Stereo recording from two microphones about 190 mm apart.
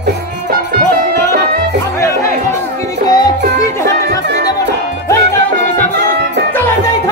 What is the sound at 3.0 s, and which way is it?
Music, 20° left (ahead or behind).